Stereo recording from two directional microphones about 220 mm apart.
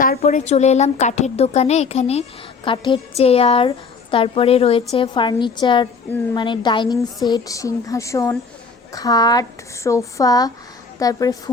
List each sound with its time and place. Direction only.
0.2 s a woman's voice: 30° left (ahead or behind); by 11.5 s 15° left (ahead or behind)